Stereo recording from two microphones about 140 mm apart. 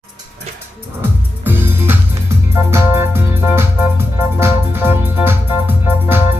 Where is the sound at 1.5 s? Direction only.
15° right (ahead or behind).